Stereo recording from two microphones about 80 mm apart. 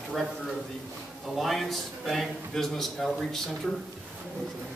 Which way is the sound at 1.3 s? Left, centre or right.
Centre.